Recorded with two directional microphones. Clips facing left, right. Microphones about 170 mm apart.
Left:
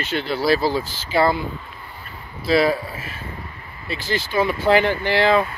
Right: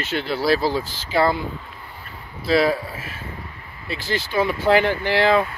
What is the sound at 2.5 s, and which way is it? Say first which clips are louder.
Speech: left 1 dB; centre (ahead or behind).